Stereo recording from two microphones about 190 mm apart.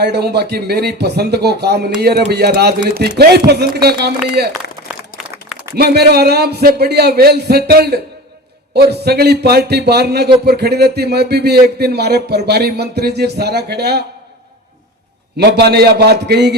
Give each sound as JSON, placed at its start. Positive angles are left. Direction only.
{"t": 0.0, "sound": "speech", "side_deg": -60}
{"t": 4.9, "sound": "a sound", "side_deg": 0}
{"t": 5.7, "sound": "speech", "side_deg": -60}
{"t": 15.4, "sound": "speech", "side_deg": -60}